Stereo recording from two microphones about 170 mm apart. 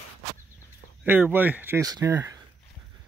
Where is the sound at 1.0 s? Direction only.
10° right (ahead or behind).